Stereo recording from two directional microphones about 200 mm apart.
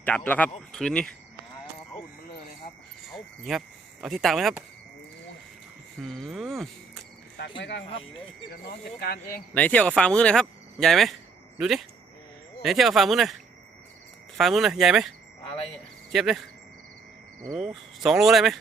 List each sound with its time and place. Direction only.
0.3 s speech: 10° left (ahead or behind)
3.5 s speech: centre (ahead or behind)
6.0 s speech: centre (ahead or behind)
7.6 s speech: 60° left (ahead or behind)
9.0 s speech: 50° left (ahead or behind)
9.6 s speech: 5° left (ahead or behind)
14.3 s speech: centre (ahead or behind)
16.1 s speech: centre (ahead or behind)
18.0 s speech: centre (ahead or behind)